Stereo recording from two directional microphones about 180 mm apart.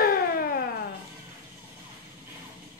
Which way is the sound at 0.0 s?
55° left (ahead or behind).